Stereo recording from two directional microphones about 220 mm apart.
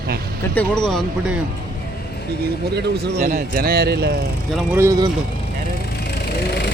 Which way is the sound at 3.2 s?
35° right (ahead or behind).